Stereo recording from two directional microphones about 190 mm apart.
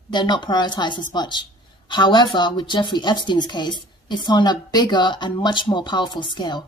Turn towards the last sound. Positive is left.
turn(degrees=20)  # may be behind; listen again after turning